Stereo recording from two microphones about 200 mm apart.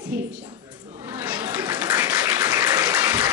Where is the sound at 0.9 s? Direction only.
10° right (ahead or behind).